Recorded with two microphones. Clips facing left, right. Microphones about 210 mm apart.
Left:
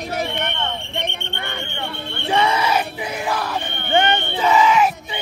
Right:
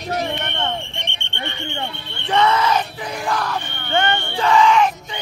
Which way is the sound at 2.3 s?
10° left (ahead or behind).